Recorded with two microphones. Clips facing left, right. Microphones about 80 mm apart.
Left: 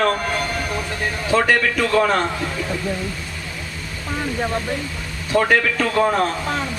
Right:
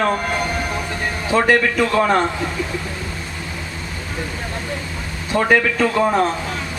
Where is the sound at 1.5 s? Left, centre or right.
Centre.